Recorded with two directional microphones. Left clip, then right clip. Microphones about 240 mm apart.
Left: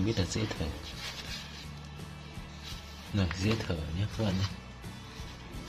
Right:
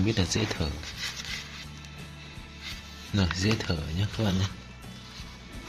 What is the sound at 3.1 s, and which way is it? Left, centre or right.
Speech, right.